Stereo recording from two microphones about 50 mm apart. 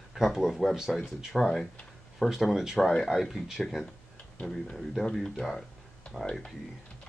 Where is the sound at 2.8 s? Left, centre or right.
Centre.